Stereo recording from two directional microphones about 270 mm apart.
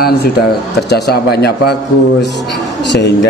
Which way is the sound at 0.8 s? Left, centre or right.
Left.